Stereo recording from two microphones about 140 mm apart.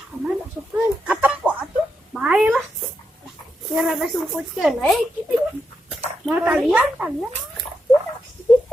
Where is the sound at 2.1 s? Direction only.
5° right (ahead or behind).